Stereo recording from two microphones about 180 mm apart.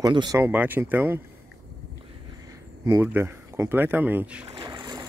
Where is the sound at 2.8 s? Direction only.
15° right (ahead or behind).